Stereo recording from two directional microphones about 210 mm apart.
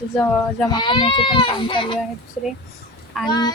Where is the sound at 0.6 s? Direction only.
20° left (ahead or behind).